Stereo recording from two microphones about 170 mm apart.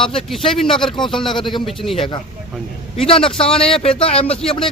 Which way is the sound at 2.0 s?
30° left (ahead or behind).